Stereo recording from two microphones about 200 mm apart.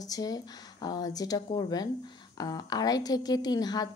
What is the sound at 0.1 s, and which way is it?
A woman's voice, 20° left (ahead or behind).